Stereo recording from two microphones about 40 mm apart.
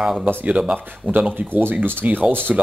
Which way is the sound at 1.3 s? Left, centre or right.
Right.